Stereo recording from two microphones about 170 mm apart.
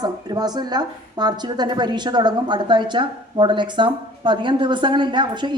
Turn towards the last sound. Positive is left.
turn(degrees=-25)  # may be behind; listen again after turning